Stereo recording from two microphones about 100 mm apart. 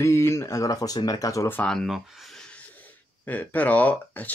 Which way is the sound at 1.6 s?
5° left (ahead or behind).